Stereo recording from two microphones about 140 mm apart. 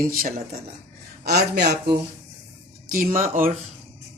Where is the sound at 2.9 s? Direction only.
85° right.